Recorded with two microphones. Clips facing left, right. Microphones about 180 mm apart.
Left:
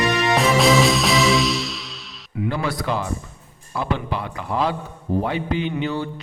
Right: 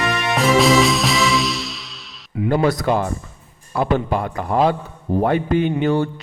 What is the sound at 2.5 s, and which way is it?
A man's voice, 45° right (ahead or behind).